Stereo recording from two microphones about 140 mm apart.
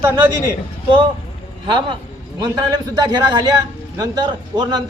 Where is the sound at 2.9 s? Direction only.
30° right (ahead or behind).